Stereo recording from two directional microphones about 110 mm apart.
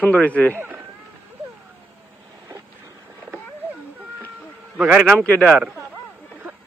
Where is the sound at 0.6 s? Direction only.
15° right (ahead or behind).